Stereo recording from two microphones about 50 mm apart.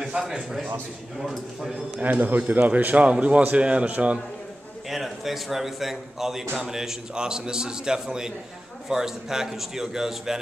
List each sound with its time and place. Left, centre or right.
0.2 s a man's voice: centre
2.0 s a man's voice: right
4.8 s a man's voice: centre